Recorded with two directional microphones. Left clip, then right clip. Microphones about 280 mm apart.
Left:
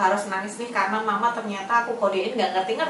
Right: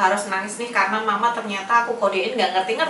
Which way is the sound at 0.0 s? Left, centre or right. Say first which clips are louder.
Right 2 dB; centre.